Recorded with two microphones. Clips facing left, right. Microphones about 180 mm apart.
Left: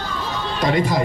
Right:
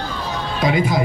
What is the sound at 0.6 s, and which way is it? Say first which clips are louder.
Speech: right 1 dB; 5° right (ahead or behind).